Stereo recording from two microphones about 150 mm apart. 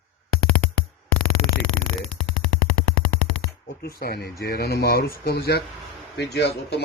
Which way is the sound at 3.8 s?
90° left.